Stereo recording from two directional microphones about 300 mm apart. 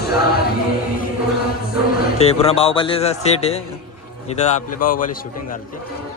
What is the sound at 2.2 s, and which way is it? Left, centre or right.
A man's voice, centre.